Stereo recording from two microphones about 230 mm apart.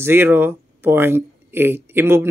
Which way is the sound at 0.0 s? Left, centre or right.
Centre.